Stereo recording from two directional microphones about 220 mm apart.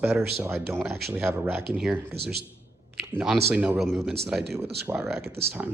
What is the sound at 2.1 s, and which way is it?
Speech, 45° right (ahead or behind).